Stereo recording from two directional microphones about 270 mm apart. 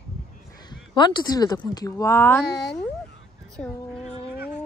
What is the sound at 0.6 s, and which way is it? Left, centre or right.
Speech, centre.